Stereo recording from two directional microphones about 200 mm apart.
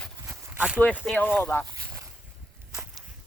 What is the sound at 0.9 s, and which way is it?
Speech, 5° left (ahead or behind).